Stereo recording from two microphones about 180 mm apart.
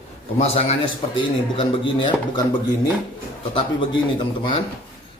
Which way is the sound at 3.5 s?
30° left (ahead or behind).